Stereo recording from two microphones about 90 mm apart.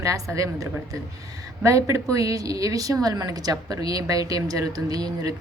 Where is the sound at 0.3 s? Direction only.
35° right (ahead or behind).